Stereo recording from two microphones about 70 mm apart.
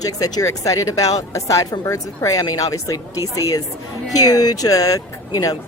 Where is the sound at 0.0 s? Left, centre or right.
Left.